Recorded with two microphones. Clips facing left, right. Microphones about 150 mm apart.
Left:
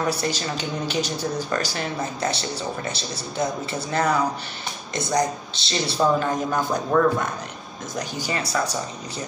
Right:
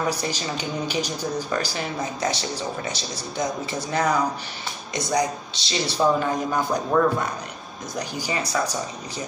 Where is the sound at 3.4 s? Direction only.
15° right (ahead or behind).